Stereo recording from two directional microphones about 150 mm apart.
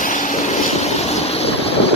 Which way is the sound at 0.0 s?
60° left (ahead or behind).